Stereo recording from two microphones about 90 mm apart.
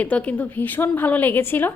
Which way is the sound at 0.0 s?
15° left (ahead or behind).